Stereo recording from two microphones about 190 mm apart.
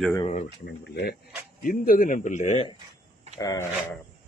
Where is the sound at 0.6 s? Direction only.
60° left (ahead or behind).